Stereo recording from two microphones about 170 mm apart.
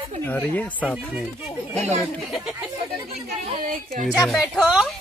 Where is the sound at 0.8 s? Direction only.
5° right (ahead or behind).